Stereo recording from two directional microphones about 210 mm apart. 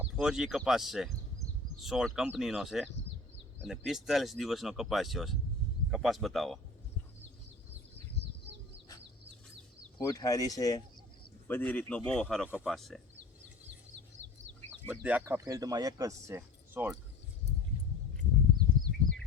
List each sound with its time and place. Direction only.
0.0 s speech: 5° right (ahead or behind)
10.0 s speech: 15° left (ahead or behind); by 13.0 s centre (ahead or behind)
14.8 s speech: 5° right (ahead or behind)